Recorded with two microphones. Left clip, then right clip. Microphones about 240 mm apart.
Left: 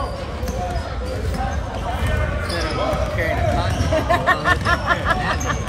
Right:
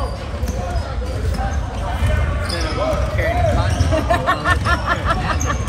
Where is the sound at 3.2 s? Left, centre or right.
Left.